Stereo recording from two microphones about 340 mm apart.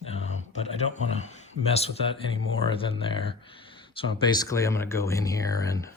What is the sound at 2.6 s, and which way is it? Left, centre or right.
Speech, centre.